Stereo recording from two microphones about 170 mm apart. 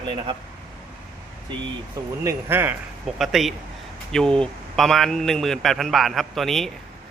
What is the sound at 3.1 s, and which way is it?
Speech, centre (ahead or behind).